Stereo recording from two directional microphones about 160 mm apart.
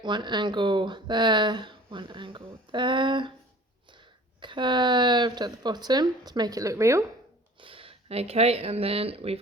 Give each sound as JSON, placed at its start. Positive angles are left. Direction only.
{"t": 0.0, "sound": "speech", "side_deg": -30}
{"t": 7.6, "sound": "speech", "side_deg": -35}